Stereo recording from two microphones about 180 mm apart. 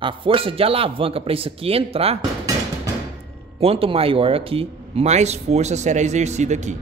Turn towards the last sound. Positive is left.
turn(degrees=-40)  # may be behind; listen again after turning